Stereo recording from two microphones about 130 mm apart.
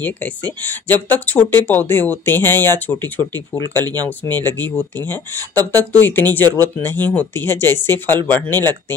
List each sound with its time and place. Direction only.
0.0 s speech: 15° left (ahead or behind)
3.7 s speech: 30° right (ahead or behind)
4.2 s speech: 15° left (ahead or behind)